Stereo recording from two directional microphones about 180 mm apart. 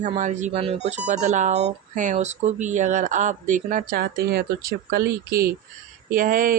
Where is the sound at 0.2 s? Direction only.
40° right (ahead or behind).